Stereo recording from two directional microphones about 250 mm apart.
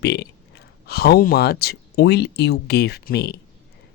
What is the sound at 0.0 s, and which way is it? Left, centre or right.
Speech, left.